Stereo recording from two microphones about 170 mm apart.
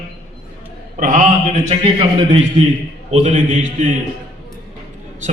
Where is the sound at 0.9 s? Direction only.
50° right (ahead or behind).